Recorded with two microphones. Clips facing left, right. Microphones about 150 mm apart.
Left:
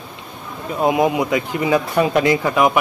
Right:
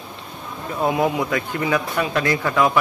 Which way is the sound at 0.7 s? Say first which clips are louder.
Left 3 dB; 15° left (ahead or behind).